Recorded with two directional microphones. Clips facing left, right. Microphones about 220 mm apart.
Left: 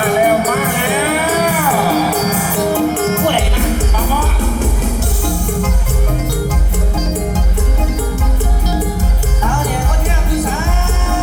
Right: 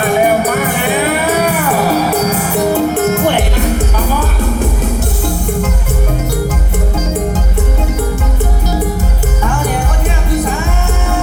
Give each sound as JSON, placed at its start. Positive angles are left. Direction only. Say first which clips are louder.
{"t": 2.7, "sound": "music", "louder": "even", "side_deg": -40}